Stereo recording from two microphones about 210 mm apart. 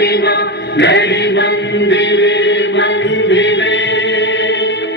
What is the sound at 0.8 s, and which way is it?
Chant, 55° left (ahead or behind).